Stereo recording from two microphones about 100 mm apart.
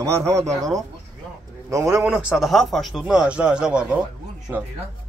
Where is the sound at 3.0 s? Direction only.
10° right (ahead or behind).